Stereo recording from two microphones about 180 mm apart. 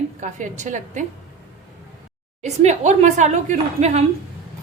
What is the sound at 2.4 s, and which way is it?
A woman's voice, 40° right (ahead or behind).